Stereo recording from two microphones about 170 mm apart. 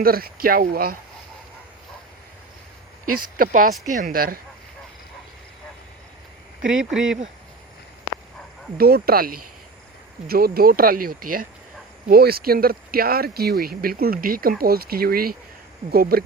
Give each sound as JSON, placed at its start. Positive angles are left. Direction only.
{"t": 0.0, "sound": "speech", "side_deg": -60}
{"t": 3.2, "sound": "speech", "side_deg": -55}
{"t": 6.6, "sound": "speech", "side_deg": -5}
{"t": 8.8, "sound": "speech", "side_deg": -65}